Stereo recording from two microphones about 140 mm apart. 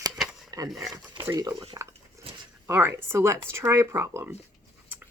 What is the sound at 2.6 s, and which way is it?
Speech, 15° right (ahead or behind).